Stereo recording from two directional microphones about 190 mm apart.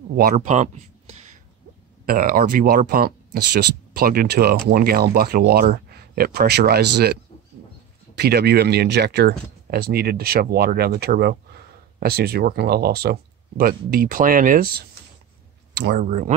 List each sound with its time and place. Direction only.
0.1 s speech: 45° right (ahead or behind)
2.0 s speech: 50° right (ahead or behind)
8.2 s speech: 55° right (ahead or behind)
16.0 s speech: 40° right (ahead or behind)